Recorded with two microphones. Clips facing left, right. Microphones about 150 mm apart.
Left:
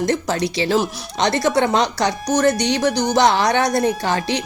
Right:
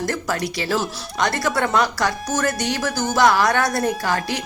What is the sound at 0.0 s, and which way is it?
Speech, 20° left (ahead or behind).